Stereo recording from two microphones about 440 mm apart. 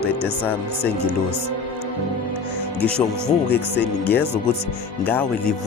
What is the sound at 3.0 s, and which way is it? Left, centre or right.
Speech, centre.